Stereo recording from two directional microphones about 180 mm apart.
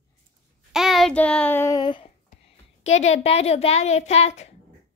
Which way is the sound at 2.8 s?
40° left (ahead or behind).